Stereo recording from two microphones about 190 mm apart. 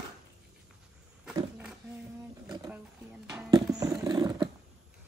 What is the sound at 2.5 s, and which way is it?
Wild animals, 20° right (ahead or behind).